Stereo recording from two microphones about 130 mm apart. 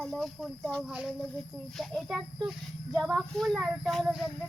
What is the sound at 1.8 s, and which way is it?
Speech, centre (ahead or behind).